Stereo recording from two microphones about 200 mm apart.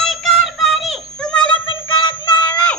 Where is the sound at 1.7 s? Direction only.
25° left (ahead or behind).